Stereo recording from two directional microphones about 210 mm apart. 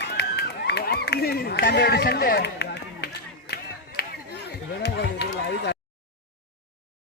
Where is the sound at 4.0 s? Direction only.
50° left (ahead or behind).